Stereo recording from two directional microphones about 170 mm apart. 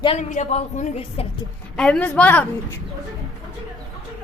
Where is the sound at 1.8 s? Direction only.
5° left (ahead or behind).